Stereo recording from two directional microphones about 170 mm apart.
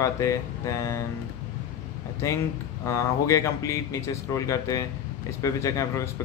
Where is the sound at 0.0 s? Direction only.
15° left (ahead or behind).